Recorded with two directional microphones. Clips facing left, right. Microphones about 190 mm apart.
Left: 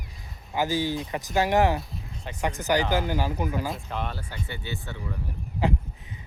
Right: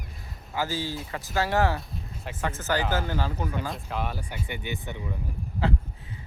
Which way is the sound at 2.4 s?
15° left (ahead or behind).